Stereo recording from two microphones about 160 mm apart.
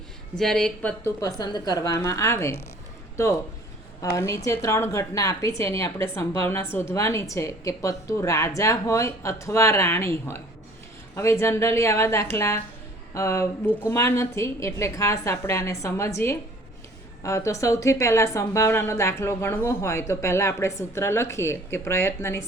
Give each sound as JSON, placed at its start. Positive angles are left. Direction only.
{"t": 0.3, "sound": "speech", "side_deg": 5}
{"t": 1.2, "sound": "a woman's voice", "side_deg": 25}
{"t": 4.0, "sound": "a woman's voice", "side_deg": 15}